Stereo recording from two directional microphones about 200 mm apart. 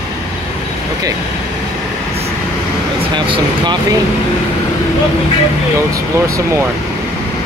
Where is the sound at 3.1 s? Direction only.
20° right (ahead or behind).